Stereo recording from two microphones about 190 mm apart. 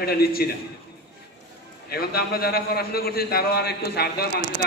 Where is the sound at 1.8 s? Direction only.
55° left (ahead or behind).